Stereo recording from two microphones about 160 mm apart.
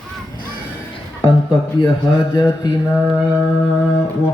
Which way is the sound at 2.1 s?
25° left (ahead or behind).